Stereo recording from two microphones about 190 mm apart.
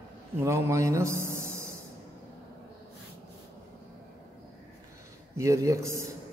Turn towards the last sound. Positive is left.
turn(degrees=-15)  # may be behind; listen again after turning